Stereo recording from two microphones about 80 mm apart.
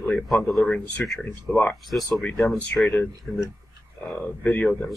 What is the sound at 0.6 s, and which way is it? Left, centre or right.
Speech, centre.